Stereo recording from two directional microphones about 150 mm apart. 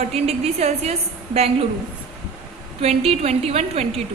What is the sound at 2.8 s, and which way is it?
A woman's voice, 45° right (ahead or behind).